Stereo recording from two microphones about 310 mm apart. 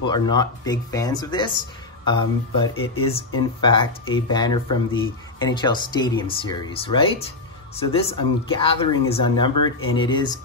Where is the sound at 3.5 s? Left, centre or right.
Centre.